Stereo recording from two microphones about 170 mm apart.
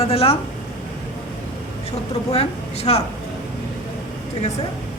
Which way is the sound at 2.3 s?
40° left (ahead or behind).